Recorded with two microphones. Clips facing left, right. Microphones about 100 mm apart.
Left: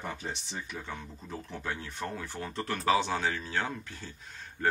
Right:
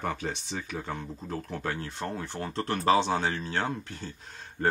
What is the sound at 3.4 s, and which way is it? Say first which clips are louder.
Speech: right 3 dB; 50° right (ahead or behind).